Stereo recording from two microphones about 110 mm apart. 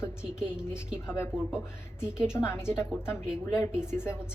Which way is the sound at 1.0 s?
25° left (ahead or behind).